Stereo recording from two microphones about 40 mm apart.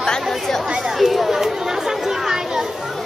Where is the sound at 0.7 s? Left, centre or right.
Centre.